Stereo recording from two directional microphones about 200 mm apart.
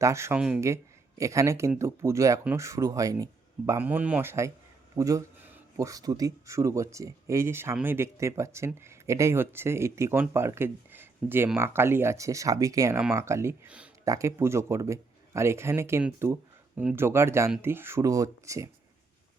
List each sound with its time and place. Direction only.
0.0 s speech: 15° right (ahead or behind)